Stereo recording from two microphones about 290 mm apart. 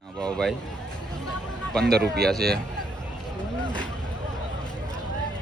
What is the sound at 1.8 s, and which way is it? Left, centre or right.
Speech, right.